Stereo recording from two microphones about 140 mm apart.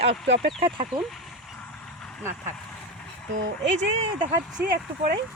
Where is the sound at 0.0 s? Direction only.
50° right (ahead or behind).